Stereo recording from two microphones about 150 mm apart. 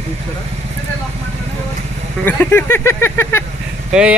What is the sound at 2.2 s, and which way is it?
Speech, 15° left (ahead or behind).